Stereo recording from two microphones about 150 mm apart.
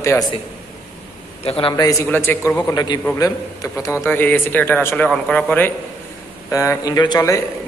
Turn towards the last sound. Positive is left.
turn(degrees=25)  # may be behind; listen again after turning